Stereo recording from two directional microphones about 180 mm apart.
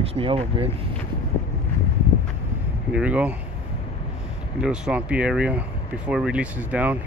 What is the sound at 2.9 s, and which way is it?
Speech, 5° right (ahead or behind).